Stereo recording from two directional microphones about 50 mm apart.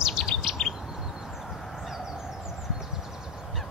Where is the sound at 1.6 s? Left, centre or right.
Centre.